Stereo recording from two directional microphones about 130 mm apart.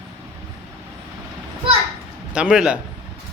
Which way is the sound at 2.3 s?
5° right (ahead or behind).